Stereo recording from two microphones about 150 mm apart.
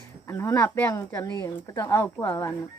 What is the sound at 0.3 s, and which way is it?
Speech, 20° left (ahead or behind).